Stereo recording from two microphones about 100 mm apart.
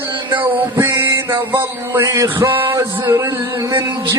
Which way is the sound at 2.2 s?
25° right (ahead or behind).